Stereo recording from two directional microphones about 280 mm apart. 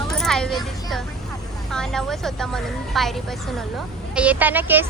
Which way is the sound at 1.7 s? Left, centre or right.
Centre.